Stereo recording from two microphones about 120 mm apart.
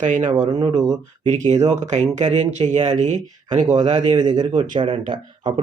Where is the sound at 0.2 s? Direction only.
35° right (ahead or behind).